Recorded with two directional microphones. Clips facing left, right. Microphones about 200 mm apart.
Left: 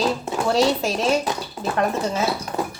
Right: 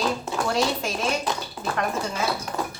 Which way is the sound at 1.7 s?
25° left (ahead or behind).